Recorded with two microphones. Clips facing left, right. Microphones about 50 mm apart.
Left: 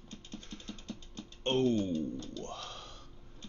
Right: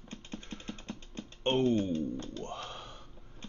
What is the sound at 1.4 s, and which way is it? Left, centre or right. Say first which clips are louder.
Speech: right 1 dB; right.